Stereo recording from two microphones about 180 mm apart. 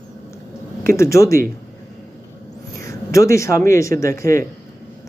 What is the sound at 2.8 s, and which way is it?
Speech, 15° left (ahead or behind).